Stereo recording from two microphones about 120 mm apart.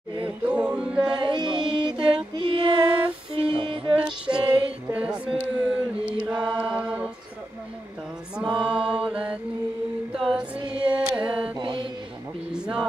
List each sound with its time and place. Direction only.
0.5 s music: 10° right (ahead or behind)
1.2 s music: 40° right (ahead or behind)
4.0 s female singing: 10° right (ahead or behind)
4.8 s chant: 10° right (ahead or behind)
8.4 s mantra: 5° right (ahead or behind)
10.1 s music: 5° right (ahead or behind)
11.5 s mantra: 45° right (ahead or behind)
12.5 s vehicle: 5° right (ahead or behind)